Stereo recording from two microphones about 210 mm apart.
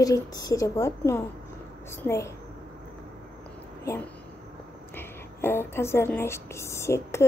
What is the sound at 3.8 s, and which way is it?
A woman's voice, 15° left (ahead or behind).